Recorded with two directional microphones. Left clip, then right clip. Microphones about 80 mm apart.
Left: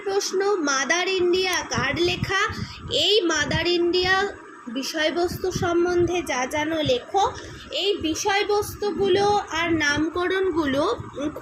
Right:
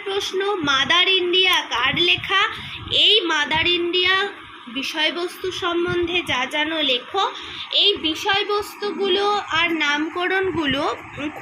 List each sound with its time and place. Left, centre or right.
0.1 s a woman's voice: left
8.5 s a woman's voice: left
10.2 s a woman's voice: left
10.6 s a woman's voice: left